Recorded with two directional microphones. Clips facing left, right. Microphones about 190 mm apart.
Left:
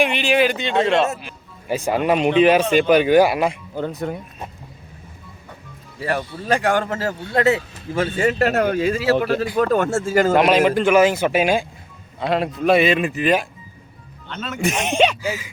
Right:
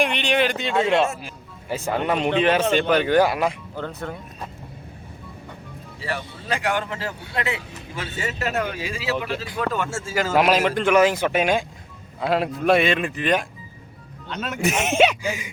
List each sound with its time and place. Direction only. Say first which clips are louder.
0.0 s a man's voice: left 3 dB; 5° left (ahead or behind)
1.6 s speech: left 4 dB; 15° left (ahead or behind)
6.0 s speech: left 7 dB; 45° left (ahead or behind)
8.2 s speech: left 7 dB; 55° left (ahead or behind)
10.3 s a man's voice: left 1 dB; centre (ahead or behind)
14.3 s a man's voice: left 1 dB; 10° right (ahead or behind)